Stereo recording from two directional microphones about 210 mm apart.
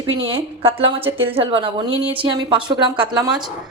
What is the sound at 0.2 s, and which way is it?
A woman's voice, 25° right (ahead or behind).